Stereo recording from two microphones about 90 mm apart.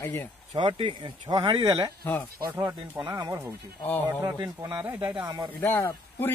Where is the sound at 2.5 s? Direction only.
25° right (ahead or behind).